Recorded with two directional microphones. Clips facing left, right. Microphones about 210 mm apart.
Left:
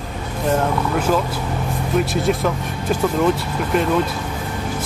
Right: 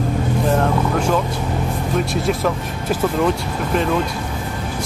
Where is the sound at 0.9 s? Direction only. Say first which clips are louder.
Even; 5° left (ahead or behind).